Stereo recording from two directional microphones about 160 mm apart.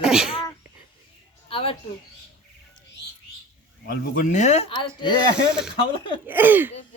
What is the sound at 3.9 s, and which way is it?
Speech, 60° left (ahead or behind).